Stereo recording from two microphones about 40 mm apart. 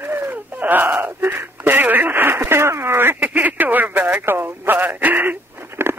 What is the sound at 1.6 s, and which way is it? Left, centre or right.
Radio, right.